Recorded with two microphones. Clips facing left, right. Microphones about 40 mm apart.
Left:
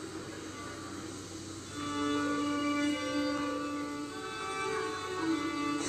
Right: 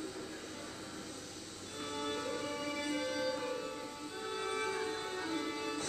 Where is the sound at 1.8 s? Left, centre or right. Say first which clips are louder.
Left 7 dB; left; by 5.7 s centre.